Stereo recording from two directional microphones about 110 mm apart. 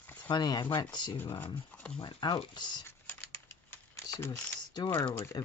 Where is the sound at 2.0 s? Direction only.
45° left (ahead or behind).